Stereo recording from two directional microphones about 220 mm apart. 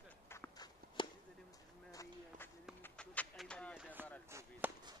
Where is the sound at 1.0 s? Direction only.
20° left (ahead or behind).